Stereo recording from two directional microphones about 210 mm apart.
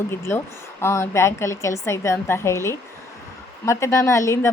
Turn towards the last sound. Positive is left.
turn(degrees=15)  # may be behind; listen again after turning